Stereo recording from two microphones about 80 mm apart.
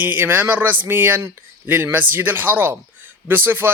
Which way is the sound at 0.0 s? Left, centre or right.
Right.